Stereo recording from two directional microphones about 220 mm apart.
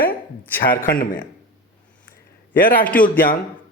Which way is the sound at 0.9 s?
40° left (ahead or behind).